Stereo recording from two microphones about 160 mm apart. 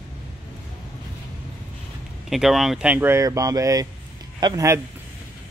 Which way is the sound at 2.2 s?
Centre (ahead or behind).